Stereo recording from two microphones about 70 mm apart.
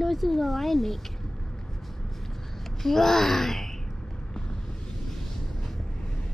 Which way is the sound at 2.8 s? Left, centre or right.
Centre.